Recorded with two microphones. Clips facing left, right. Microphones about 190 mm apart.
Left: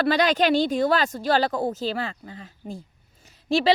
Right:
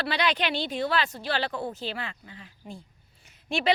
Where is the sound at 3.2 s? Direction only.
35° left (ahead or behind).